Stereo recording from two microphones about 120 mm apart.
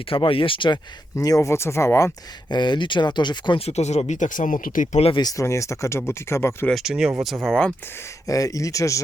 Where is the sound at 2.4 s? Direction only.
40° left (ahead or behind).